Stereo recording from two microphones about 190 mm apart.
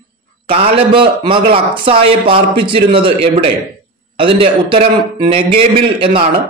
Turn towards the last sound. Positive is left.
turn(degrees=-25)  # may be behind; listen again after turning